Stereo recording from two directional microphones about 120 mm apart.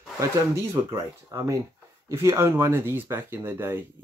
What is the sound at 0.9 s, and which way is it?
Speech, 25° right (ahead or behind).